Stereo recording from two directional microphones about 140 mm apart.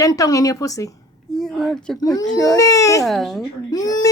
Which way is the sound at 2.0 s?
25° left (ahead or behind).